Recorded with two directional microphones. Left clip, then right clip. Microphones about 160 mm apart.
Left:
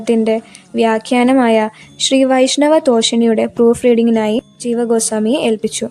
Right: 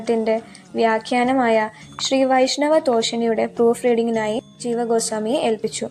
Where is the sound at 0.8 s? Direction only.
40° left (ahead or behind).